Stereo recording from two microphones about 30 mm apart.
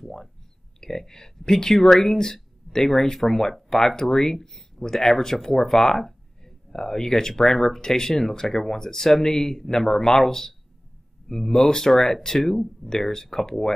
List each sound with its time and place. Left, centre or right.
1.0 s speech: left